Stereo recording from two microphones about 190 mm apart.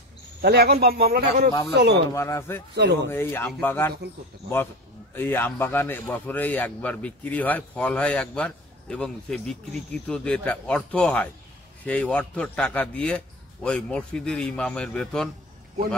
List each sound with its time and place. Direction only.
0.4 s speech: 55° right (ahead or behind)
2.1 s speech: 15° left (ahead or behind)
2.7 s speech: 65° right (ahead or behind)
3.1 s speech: 10° left (ahead or behind)
5.1 s speech: 10° left (ahead or behind)